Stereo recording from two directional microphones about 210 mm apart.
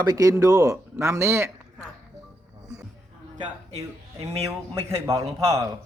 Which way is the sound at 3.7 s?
30° right (ahead or behind).